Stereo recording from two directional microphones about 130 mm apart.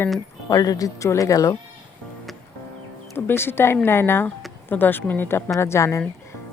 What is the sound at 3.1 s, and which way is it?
Speech, 15° left (ahead or behind).